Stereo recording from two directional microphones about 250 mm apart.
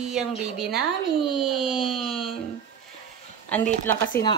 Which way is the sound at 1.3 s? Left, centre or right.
Centre.